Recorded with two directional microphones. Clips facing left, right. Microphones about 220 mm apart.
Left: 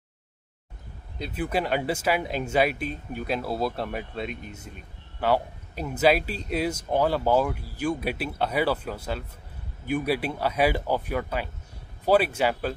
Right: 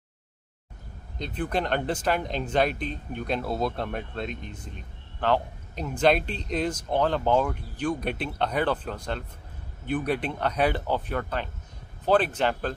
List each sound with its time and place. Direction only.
1.1 s speech: 5° left (ahead or behind)